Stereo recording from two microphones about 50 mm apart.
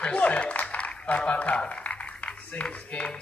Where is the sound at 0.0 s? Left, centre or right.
Left.